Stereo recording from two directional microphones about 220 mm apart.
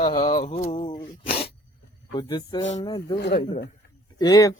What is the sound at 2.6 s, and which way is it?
Mantra, 30° left (ahead or behind).